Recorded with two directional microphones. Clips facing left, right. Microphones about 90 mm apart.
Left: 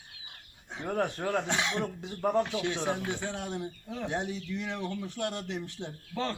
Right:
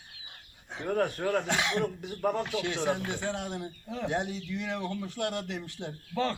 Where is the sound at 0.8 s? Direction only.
20° left (ahead or behind).